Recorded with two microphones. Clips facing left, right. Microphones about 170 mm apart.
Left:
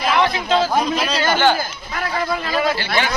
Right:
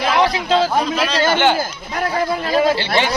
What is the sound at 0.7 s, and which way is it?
Speech, 10° left (ahead or behind).